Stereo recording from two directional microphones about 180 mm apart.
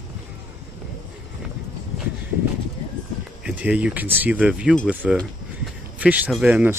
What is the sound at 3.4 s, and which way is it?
Speech, 5° right (ahead or behind).